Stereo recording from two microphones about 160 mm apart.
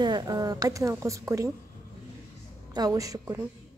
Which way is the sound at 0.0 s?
25° right (ahead or behind).